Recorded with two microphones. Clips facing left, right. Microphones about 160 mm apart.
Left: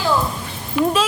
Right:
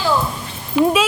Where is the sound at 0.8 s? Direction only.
25° right (ahead or behind).